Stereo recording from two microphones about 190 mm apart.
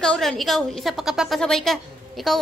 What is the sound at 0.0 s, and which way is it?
A woman's voice, 5° left (ahead or behind).